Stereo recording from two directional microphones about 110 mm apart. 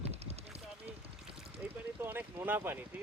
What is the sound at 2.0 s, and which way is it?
Speech, 20° right (ahead or behind).